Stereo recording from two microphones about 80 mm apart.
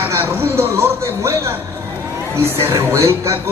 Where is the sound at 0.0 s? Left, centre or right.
Right.